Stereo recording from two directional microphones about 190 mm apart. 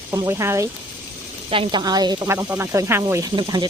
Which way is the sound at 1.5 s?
25° right (ahead or behind).